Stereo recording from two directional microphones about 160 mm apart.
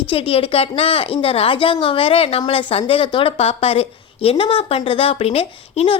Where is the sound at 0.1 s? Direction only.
35° left (ahead or behind).